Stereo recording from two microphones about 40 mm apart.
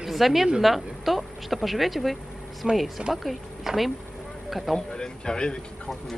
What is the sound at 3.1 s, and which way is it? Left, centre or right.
Speech, centre.